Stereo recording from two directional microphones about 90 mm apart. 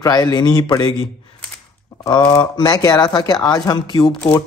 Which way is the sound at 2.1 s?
55° left (ahead or behind).